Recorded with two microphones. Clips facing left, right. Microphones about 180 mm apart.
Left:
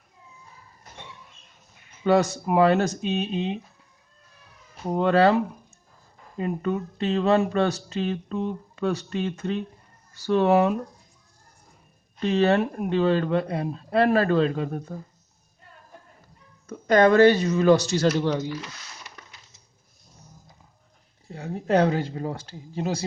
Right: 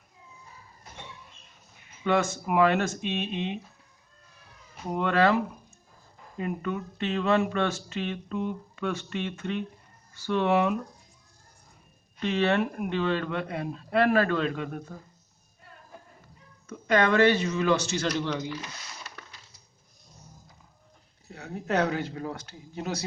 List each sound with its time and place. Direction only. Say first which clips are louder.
2.0 s speech: left 5 dB; 35° left (ahead or behind)
4.9 s speech: left 4 dB; 35° left (ahead or behind)
12.2 s speech: left 4 dB; 35° left (ahead or behind)
16.6 s speech: left 6 dB; 40° left (ahead or behind)
21.2 s speech: left 6 dB; 30° left (ahead or behind)